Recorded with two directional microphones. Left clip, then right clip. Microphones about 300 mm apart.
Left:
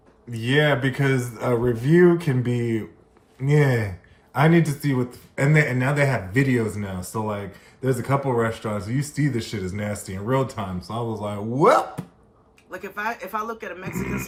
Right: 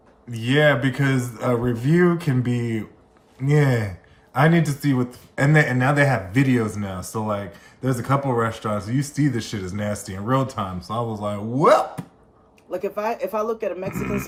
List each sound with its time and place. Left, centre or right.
0.3 s speech: centre
13.1 s speech: left